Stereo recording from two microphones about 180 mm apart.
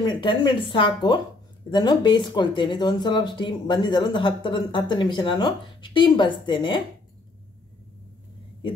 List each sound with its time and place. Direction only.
0.0 s speech: 25° left (ahead or behind)